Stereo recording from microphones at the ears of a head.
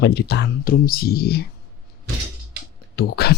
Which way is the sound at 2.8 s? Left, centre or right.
Left.